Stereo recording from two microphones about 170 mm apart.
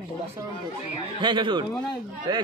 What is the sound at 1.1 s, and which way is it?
Speech, 25° right (ahead or behind).